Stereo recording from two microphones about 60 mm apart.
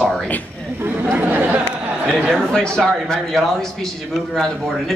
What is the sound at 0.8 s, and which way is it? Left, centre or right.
Speech, right.